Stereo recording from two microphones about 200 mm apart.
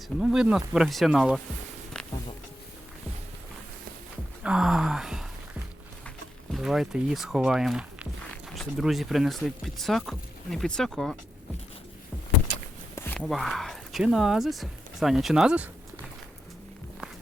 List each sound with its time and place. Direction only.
0.2 s speech: 5° right (ahead or behind)
4.4 s a sound: 5° right (ahead or behind)
6.5 s speech: centre (ahead or behind)
13.0 s speech: 5° left (ahead or behind)